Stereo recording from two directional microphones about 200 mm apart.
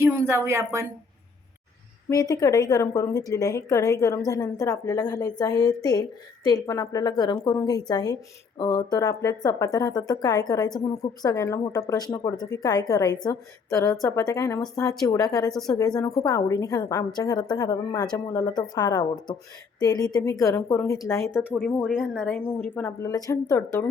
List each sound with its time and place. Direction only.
0.0 s speech: 10° right (ahead or behind)
2.0 s a woman's voice: 15° left (ahead or behind)
21.5 s speech: 5° left (ahead or behind)
22.4 s a woman's voice: 10° left (ahead or behind)